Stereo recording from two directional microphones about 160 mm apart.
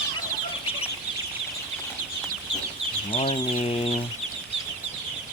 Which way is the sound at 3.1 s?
35° left (ahead or behind).